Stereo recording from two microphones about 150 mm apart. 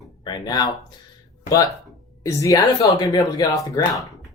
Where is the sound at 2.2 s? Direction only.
20° left (ahead or behind).